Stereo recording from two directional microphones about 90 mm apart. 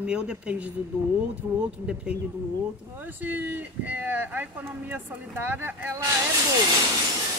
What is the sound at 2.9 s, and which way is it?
Speech, 20° right (ahead or behind).